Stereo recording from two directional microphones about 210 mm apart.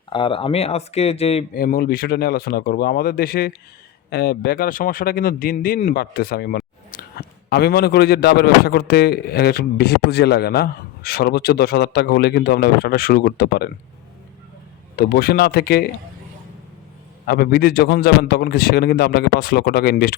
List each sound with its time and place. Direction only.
0.1 s speech: 25° left (ahead or behind)
1.5 s speech: 45° left (ahead or behind)
14.9 s speech: 45° left (ahead or behind)
17.2 s speech: 50° left (ahead or behind)